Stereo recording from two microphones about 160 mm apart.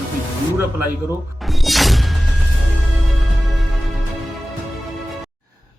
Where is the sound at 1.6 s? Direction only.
Centre (ahead or behind).